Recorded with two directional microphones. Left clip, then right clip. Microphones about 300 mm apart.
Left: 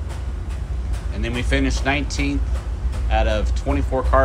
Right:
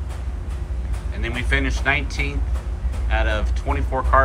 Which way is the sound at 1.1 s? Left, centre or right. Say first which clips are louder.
Even; centre.